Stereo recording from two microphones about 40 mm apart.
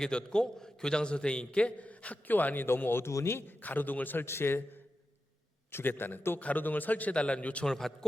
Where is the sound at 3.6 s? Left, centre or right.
Left.